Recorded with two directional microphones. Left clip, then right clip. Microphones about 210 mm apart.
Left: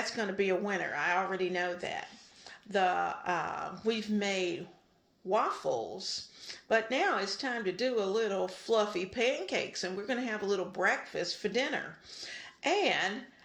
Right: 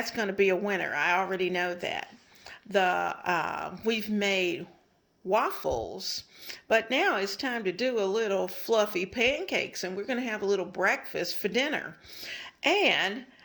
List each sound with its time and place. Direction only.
0.0 s speech: 30° right (ahead or behind)